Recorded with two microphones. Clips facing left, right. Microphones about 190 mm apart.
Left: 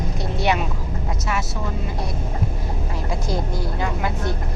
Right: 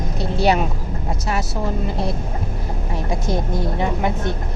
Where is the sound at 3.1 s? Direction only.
20° right (ahead or behind).